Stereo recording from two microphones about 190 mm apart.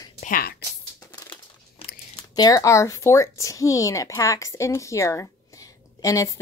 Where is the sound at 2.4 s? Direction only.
20° left (ahead or behind).